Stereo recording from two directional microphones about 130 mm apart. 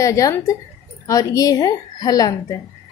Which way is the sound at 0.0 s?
25° left (ahead or behind).